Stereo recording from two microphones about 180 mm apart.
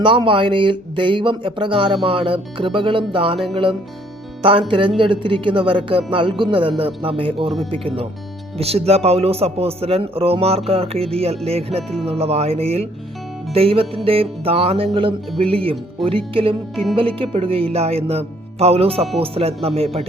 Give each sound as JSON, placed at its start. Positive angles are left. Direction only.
{"t": 0.0, "sound": "speech", "side_deg": -25}
{"t": 11.8, "sound": "speech", "side_deg": 0}
{"t": 12.0, "sound": "speech", "side_deg": -35}